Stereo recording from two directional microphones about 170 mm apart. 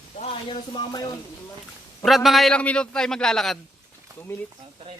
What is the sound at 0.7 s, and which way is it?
Speech, 25° left (ahead or behind).